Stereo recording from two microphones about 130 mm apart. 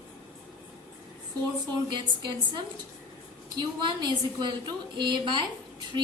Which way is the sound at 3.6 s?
35° right (ahead or behind).